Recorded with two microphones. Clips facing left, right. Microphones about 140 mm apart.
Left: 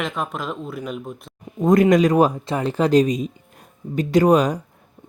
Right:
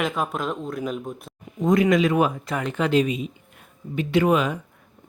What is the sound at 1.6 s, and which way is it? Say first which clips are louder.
Speech: left 4 dB; 45° left (ahead or behind).